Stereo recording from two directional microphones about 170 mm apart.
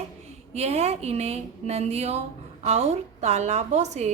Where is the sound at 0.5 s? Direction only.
40° right (ahead or behind).